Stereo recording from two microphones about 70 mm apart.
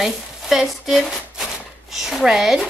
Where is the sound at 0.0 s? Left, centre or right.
Centre.